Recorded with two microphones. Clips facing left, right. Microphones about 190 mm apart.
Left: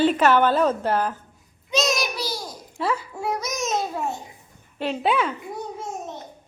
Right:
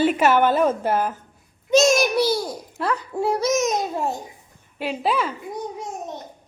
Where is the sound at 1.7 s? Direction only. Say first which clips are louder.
Right 8 dB; 50° right (ahead or behind).